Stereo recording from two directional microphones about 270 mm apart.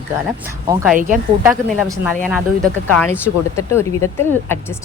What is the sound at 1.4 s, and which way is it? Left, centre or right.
Speech, centre.